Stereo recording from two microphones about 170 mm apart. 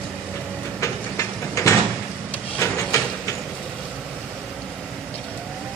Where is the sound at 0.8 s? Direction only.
15° left (ahead or behind).